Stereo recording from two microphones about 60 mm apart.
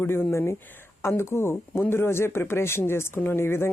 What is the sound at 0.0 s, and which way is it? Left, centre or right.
Speech, left.